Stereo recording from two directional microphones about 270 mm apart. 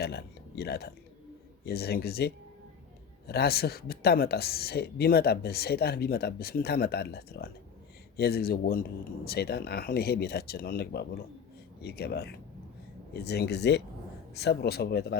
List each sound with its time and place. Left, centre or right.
0.0 s speech: left